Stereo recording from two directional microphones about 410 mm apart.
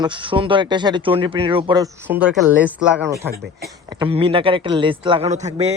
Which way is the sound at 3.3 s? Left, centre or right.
Right.